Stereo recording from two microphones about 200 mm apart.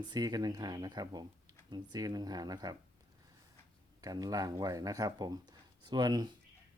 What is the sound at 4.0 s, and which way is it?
Speech, 20° right (ahead or behind).